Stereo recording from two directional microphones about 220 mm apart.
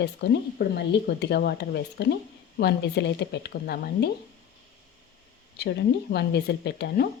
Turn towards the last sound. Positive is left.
turn(degrees=50)  # may be behind; listen again after turning